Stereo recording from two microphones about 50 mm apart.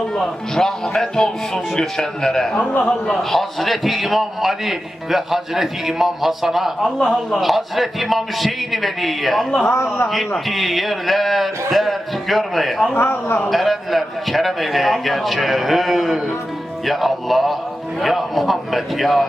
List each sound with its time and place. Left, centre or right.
0.2 s speech: centre
2.6 s a man's voice: left
3.1 s speech: centre
9.7 s a man's voice: left
10.1 s speech: centre
13.0 s a man's voice: left
13.5 s speech: centre